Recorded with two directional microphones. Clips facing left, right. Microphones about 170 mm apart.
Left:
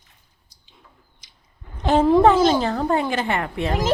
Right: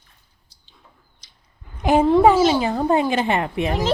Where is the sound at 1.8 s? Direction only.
10° right (ahead or behind).